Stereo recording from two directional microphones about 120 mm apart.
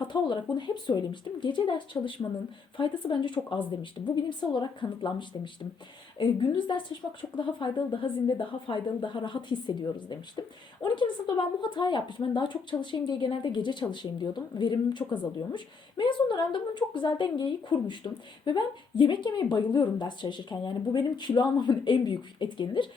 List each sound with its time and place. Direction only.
0.0 s a woman's voice: 40° left (ahead or behind)
6.7 s a woman's voice: 40° left (ahead or behind)